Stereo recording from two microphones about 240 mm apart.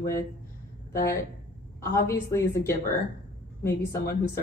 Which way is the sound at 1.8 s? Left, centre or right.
Centre.